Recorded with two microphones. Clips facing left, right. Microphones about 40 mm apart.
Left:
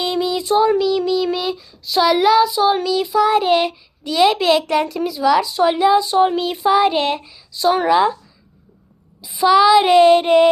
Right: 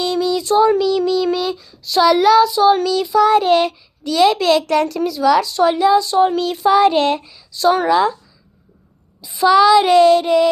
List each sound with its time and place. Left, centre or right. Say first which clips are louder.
0.0 s child singing: right 2 dB; left
0.6 s child singing: right 2 dB; centre
7.9 s speech: even; centre
9.2 s child singing: right 1 dB; centre
9.8 s child singing: even; left